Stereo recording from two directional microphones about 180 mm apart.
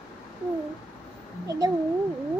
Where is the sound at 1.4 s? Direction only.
20° right (ahead or behind).